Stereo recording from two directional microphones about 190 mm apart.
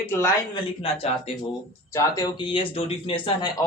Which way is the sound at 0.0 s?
10° left (ahead or behind).